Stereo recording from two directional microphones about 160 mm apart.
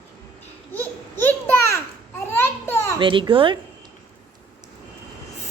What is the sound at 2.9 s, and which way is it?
Speech, 30° right (ahead or behind).